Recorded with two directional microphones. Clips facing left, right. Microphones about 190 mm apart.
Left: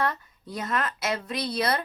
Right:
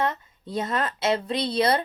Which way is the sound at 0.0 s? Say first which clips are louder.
Right 2 dB; 25° right (ahead or behind).